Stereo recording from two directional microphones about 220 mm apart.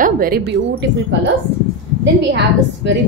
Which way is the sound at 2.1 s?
50° right (ahead or behind).